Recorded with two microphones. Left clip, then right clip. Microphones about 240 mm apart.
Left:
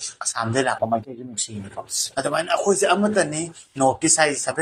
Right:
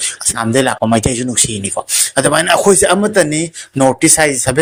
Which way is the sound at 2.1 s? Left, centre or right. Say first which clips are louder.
Right 11 dB; right.